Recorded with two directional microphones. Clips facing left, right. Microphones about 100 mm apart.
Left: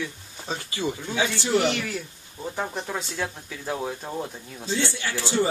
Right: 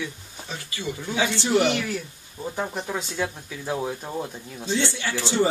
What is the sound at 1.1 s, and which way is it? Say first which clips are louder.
Speech: right 3 dB; 20° right (ahead or behind).